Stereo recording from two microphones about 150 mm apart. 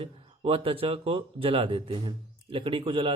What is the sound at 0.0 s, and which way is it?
Speech, 40° right (ahead or behind).